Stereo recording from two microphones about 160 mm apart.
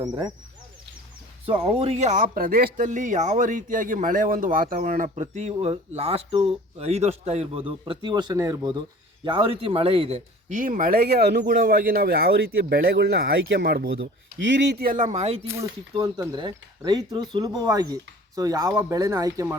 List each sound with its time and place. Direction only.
0.0 s speech: 25° right (ahead or behind)
1.5 s speech: 40° right (ahead or behind); by 5.1 s 60° right (ahead or behind)
5.1 s speech: 45° right (ahead or behind)
15.4 s speech: 20° right (ahead or behind)